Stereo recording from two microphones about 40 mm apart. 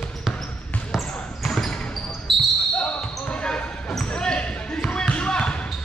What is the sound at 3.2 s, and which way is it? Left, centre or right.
Basketball bounce, left.